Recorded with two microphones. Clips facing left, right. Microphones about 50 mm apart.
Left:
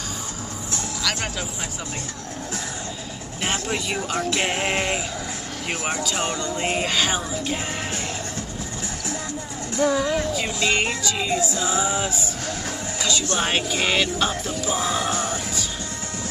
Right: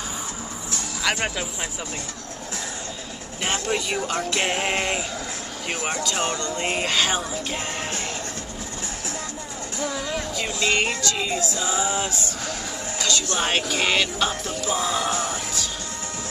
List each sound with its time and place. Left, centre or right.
1.1 s speech: right
3.4 s speech: centre
9.8 s speech: left
10.1 s speech: centre
13.4 s speech: centre